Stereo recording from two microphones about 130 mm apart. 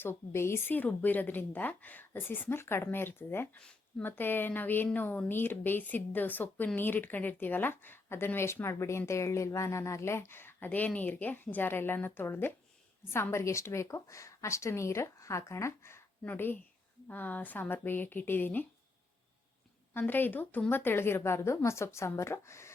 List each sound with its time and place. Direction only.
0.0 s a woman's voice: 20° left (ahead or behind)
19.9 s a woman's voice: 15° left (ahead or behind)